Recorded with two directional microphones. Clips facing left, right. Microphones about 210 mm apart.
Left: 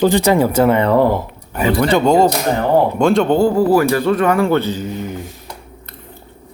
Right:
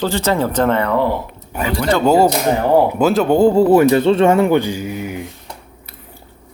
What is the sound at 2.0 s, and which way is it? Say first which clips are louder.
Speech: even; 5° right (ahead or behind).